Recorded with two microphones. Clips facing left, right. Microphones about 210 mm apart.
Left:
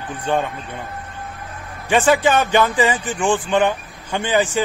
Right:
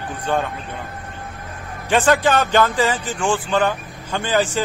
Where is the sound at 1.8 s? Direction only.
10° left (ahead or behind).